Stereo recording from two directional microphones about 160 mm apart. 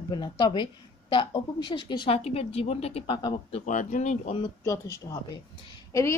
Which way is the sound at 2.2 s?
40° left (ahead or behind).